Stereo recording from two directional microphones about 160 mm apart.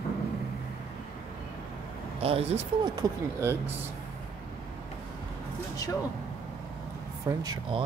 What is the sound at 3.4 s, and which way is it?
Speech, 15° right (ahead or behind).